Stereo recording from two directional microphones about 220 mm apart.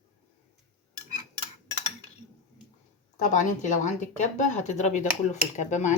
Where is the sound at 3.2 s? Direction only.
35° left (ahead or behind).